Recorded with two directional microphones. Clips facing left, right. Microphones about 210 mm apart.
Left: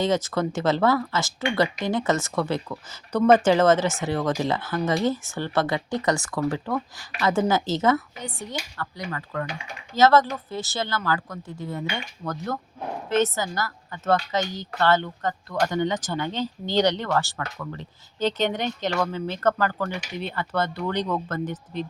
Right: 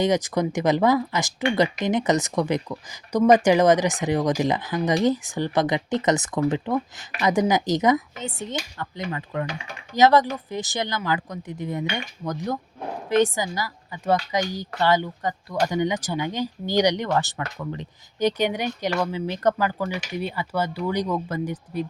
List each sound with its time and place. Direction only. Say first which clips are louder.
0.0 s speech: right 2 dB; 15° right (ahead or behind)